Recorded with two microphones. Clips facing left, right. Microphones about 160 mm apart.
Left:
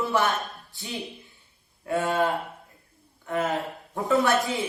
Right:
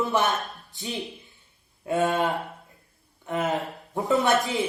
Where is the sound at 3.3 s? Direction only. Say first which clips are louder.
Even; 20° right (ahead or behind).